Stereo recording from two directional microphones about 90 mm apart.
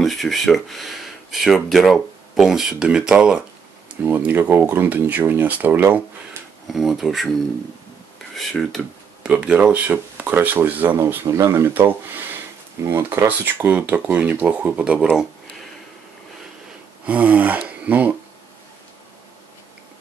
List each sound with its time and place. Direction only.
0.0 s speech: centre (ahead or behind); by 6.0 s 20° right (ahead or behind)
6.7 s speech: 5° right (ahead or behind)
8.4 s speech: centre (ahead or behind)
9.2 s speech: 10° right (ahead or behind)
11.2 s speech: 35° right (ahead or behind)
11.7 s speech: 20° right (ahead or behind)
17.0 s speech: 15° right (ahead or behind)